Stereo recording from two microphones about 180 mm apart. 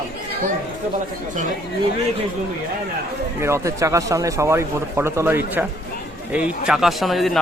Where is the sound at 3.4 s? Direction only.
15° right (ahead or behind); by 7.3 s centre (ahead or behind).